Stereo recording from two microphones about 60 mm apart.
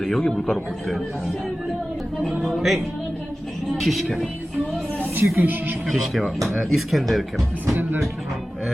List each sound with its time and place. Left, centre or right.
0.0 s a man's voice: centre
2.4 s speech: centre
5.4 s speech: right
5.9 s speech: centre